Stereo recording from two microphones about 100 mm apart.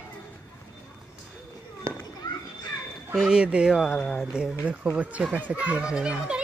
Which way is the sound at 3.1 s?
5° right (ahead or behind).